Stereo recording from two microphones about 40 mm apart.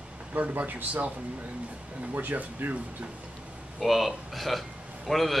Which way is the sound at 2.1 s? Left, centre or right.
Right.